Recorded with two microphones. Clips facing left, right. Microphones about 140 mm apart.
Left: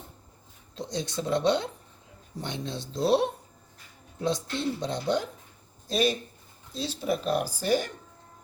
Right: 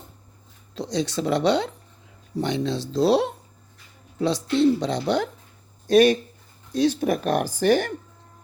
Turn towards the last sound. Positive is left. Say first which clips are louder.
# right 6 dB
turn(degrees=-70)  # may be behind; listen again after turning